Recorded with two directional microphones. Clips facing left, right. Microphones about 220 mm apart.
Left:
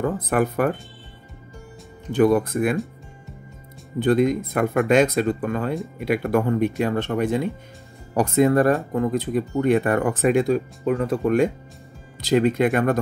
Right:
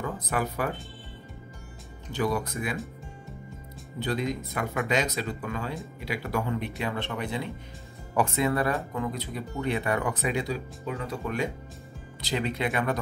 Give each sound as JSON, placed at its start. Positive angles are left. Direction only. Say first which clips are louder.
{"t": 0.0, "sound": "speech", "louder": "left 9 dB", "side_deg": 55}
{"t": 2.1, "sound": "speech", "louder": "left 11 dB", "side_deg": 55}
{"t": 4.0, "sound": "speech", "louder": "left 11 dB", "side_deg": 50}